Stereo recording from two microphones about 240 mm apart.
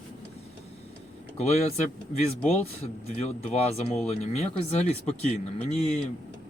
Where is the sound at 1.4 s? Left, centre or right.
Left.